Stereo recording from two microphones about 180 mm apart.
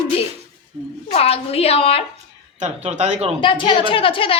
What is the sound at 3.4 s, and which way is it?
Speech, 25° left (ahead or behind).